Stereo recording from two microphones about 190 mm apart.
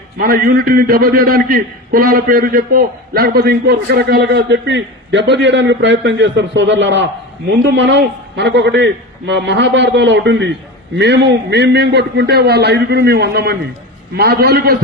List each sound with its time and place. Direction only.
0.2 s a man's voice: 50° right (ahead or behind)